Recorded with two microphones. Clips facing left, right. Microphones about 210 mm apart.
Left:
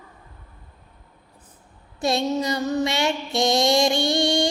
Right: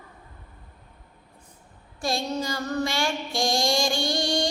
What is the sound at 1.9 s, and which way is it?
A woman's voice, 25° left (ahead or behind).